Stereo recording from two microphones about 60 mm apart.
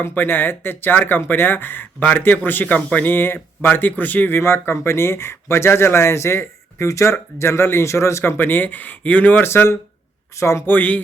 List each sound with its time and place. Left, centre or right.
0.1 s speech: left
4.4 s speech: left
8.4 s speech: left
9.4 s speech: left
10.7 s speech: left